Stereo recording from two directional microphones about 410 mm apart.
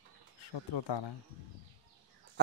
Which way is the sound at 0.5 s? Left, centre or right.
Left.